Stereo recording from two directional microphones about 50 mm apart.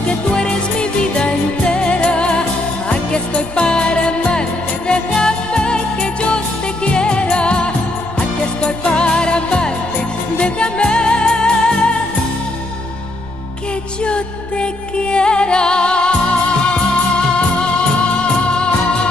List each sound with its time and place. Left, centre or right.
0.3 s music: centre
14.0 s music: left